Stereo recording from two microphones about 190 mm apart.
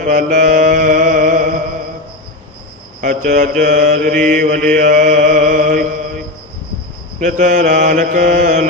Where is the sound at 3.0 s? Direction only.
40° right (ahead or behind).